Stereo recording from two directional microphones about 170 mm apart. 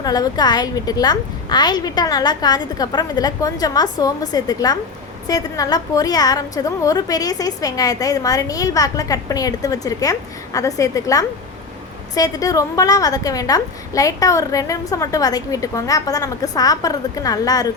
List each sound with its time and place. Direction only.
0.0 s a woman's voice: 25° left (ahead or behind)